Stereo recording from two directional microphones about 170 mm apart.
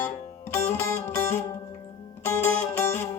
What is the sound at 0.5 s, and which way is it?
Music, 15° left (ahead or behind).